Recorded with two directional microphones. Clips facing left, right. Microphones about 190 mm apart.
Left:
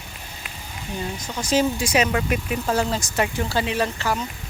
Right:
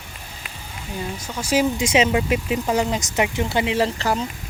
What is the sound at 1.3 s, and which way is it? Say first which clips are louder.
Speech: even; 10° right (ahead or behind).